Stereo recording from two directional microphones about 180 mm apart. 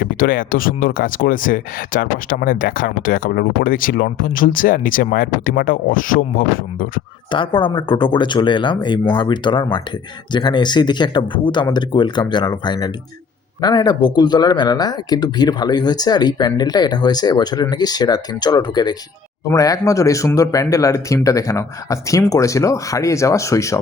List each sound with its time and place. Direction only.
0.0 s speech: 50° left (ahead or behind)
7.3 s speech: 25° left (ahead or behind)